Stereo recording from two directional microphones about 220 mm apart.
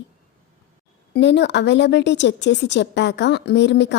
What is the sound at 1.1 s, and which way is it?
Speech, 50° left (ahead or behind).